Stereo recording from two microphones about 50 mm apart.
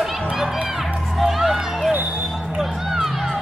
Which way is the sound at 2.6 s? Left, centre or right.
Centre.